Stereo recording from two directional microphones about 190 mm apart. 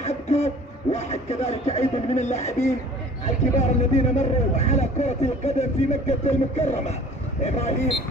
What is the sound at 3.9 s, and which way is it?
Speech, 35° left (ahead or behind).